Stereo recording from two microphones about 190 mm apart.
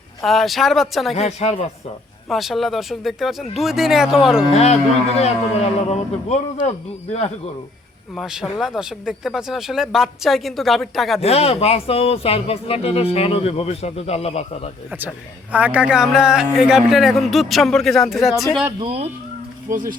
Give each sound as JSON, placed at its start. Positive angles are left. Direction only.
{"t": 0.2, "sound": "a man's voice", "side_deg": 0}
{"t": 1.1, "sound": "speech", "side_deg": 35}
{"t": 2.3, "sound": "a man's voice", "side_deg": 0}
{"t": 4.5, "sound": "speech", "side_deg": 35}
{"t": 8.1, "sound": "a man's voice", "side_deg": 0}
{"t": 11.2, "sound": "speech", "side_deg": 30}
{"t": 14.8, "sound": "a man's voice", "side_deg": -10}
{"t": 18.8, "sound": "speech", "side_deg": -30}
{"t": 19.7, "sound": "speech", "side_deg": -45}